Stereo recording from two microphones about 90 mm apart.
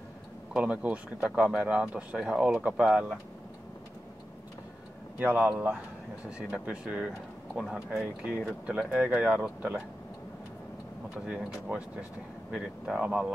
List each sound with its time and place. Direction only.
0.6 s speech: 15° right (ahead or behind)
5.2 s speech: 20° right (ahead or behind)
11.2 s speech: 10° right (ahead or behind)